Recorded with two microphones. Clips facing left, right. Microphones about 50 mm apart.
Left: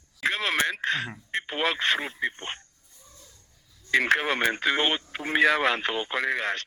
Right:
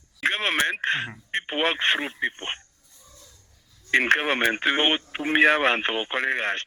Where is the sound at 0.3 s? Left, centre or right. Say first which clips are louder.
Right 2 dB; right.